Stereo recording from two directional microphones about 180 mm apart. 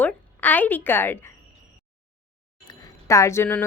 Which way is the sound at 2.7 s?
20° left (ahead or behind).